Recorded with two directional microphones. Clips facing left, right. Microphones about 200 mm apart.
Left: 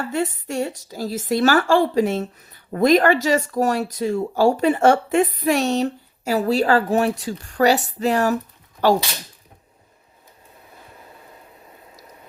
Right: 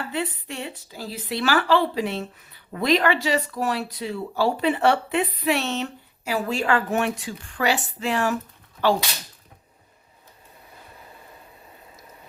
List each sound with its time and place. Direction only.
0.0 s a woman's voice: 45° left (ahead or behind)